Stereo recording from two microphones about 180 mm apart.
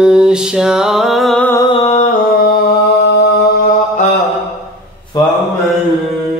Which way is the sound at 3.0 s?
70° left (ahead or behind).